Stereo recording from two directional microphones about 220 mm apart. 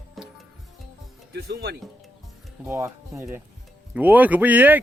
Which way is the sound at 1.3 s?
45° right (ahead or behind).